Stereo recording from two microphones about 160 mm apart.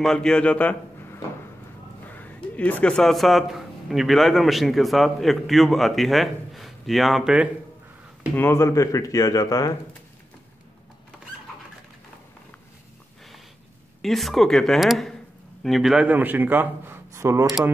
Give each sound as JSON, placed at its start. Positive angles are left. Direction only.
{"t": 0.0, "sound": "a man's voice", "side_deg": 5}
{"t": 8.4, "sound": "speech", "side_deg": 15}
{"t": 14.0, "sound": "a man's voice", "side_deg": 0}